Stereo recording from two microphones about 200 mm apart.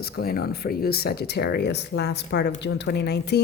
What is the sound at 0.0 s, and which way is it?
A woman's voice, 50° left (ahead or behind).